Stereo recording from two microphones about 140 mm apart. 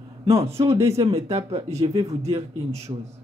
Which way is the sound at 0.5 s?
20° right (ahead or behind).